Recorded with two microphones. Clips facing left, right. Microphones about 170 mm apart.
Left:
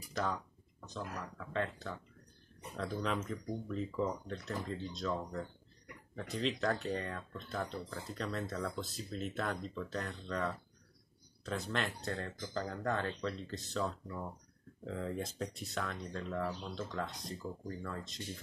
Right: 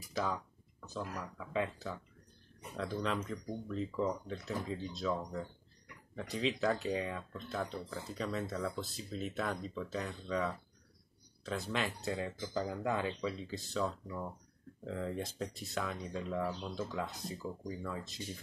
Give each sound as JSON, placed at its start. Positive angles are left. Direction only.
{"t": 0.1, "sound": "speech", "side_deg": 0}